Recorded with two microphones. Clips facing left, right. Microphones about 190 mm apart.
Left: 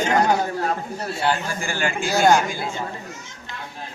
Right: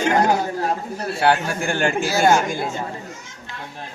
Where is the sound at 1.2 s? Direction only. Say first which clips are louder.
Right 5 dB; 70° right (ahead or behind); by 2.1 s 50° right (ahead or behind).